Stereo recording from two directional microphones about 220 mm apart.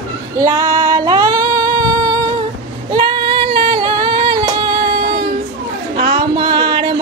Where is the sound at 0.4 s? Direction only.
20° right (ahead or behind).